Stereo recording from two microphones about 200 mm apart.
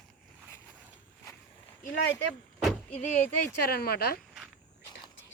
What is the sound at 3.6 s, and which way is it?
Speech, 50° left (ahead or behind).